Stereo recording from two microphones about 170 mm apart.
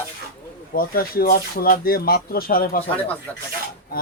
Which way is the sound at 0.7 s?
60° left (ahead or behind).